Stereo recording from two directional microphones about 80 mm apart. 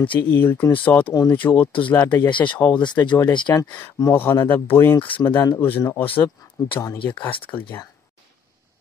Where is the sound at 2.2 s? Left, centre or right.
Left.